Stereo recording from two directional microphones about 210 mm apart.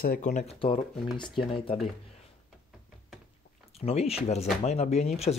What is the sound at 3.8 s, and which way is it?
Speech, 30° left (ahead or behind).